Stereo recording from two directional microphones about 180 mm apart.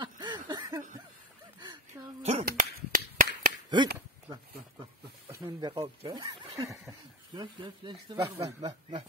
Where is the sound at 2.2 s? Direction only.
35° right (ahead or behind).